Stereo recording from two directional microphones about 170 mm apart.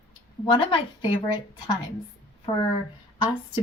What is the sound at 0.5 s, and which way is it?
A woman's voice, 30° left (ahead or behind).